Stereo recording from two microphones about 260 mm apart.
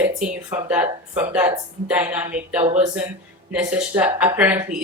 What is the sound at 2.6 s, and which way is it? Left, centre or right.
Speech, right.